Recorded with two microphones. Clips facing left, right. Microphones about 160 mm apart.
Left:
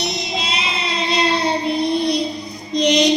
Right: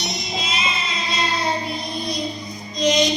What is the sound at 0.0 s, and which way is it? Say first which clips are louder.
Music: left 4 dB; 70° left (ahead or behind).